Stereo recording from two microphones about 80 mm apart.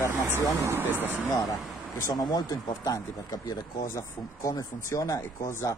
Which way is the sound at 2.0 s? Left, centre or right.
Left.